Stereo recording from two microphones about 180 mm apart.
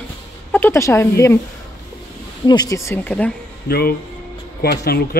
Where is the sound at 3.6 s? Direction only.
60° left (ahead or behind).